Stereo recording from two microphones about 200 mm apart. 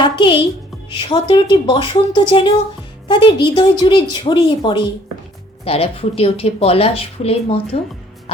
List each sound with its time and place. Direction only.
0.0 s music: 25° left (ahead or behind)
0.9 s speech: 25° left (ahead or behind)